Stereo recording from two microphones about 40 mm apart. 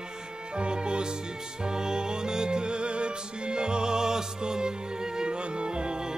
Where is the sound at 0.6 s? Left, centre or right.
Right.